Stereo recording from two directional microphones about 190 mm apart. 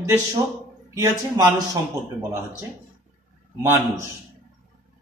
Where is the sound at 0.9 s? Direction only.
15° right (ahead or behind).